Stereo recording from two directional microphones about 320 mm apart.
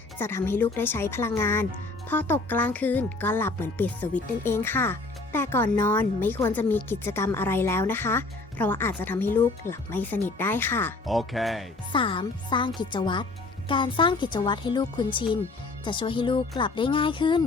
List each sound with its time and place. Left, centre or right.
0.2 s speech: centre
11.9 s speech: centre